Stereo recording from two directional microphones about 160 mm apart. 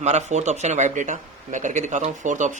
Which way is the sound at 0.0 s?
45° right (ahead or behind).